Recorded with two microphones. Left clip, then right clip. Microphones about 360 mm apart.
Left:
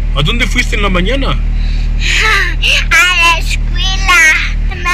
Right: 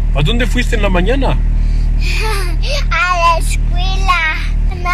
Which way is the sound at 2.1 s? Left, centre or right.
Centre.